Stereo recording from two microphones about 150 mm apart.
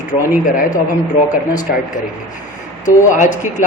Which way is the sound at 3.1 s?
55° left (ahead or behind).